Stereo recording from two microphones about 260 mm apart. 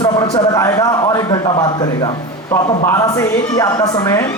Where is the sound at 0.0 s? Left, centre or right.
Centre.